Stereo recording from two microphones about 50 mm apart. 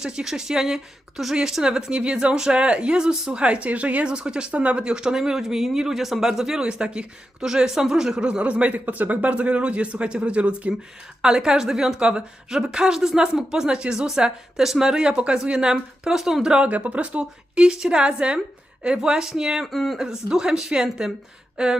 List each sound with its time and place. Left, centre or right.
0.0 s speech: centre
8.4 s speech: right
11.2 s speech: centre
16.6 s speech: right; by 19.6 s centre
19.6 s speech: centre
20.0 s speech: centre